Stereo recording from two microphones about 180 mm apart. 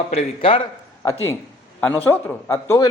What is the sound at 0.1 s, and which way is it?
Speech, 35° left (ahead or behind).